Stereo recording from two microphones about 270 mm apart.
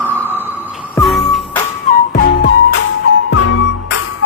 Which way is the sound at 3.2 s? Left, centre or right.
Left.